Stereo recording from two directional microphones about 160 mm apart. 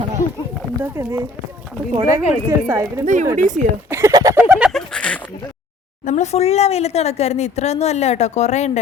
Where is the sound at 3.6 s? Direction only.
5° left (ahead or behind).